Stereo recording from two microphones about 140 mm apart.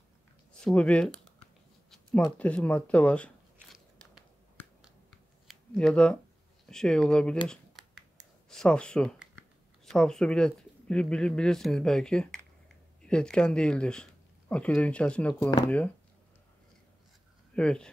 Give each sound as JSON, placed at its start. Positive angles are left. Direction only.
{"t": 0.5, "sound": "speech", "side_deg": 5}
{"t": 1.9, "sound": "a sound", "side_deg": 5}
{"t": 2.3, "sound": "speech", "side_deg": 10}
{"t": 5.5, "sound": "speech", "side_deg": 5}
{"t": 8.5, "sound": "speech", "side_deg": 5}
{"t": 15.3, "sound": "speech", "side_deg": 20}
{"t": 17.6, "sound": "speech", "side_deg": 5}